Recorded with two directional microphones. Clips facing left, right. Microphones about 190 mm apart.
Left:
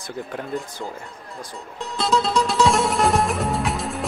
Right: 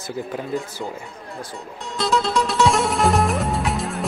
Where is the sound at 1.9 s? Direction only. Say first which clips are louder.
Even; centre (ahead or behind).